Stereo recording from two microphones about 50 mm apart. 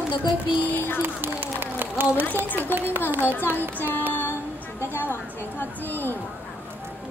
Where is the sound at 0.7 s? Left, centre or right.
Left.